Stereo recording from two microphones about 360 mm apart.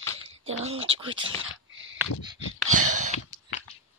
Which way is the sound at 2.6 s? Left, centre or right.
Right.